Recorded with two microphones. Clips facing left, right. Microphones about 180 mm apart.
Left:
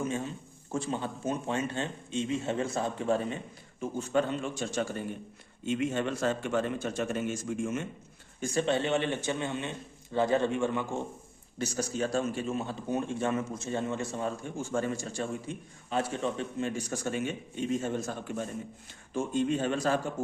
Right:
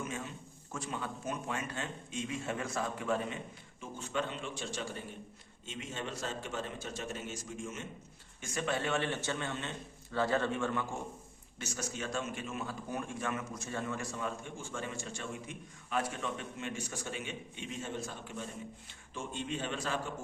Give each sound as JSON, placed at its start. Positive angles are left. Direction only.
{"t": 0.0, "sound": "a sound", "side_deg": 30}
{"t": 0.7, "sound": "a man's voice", "side_deg": 30}
{"t": 8.4, "sound": "speech", "side_deg": 30}
{"t": 11.5, "sound": "a man's voice", "side_deg": 35}